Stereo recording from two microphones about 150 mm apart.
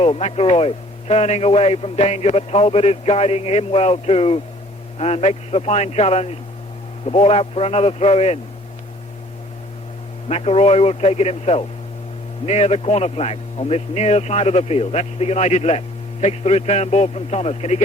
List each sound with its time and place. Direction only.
0.0 s a man's voice: 45° left (ahead or behind)
10.2 s a man's voice: 45° left (ahead or behind)